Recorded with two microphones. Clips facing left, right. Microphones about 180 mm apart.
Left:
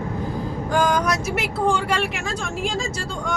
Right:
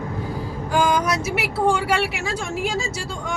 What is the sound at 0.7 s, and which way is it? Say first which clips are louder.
Speech: right 1 dB; 10° right (ahead or behind).